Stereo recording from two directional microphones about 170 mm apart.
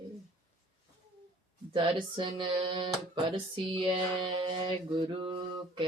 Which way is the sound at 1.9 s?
30° right (ahead or behind).